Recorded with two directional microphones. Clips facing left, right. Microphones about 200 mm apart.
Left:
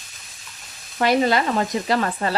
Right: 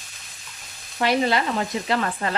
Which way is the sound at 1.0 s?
45° left (ahead or behind).